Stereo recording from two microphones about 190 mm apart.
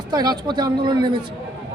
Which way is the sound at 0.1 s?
20° right (ahead or behind).